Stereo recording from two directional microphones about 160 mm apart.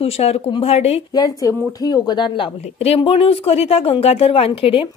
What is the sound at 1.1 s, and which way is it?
Speech, 25° left (ahead or behind).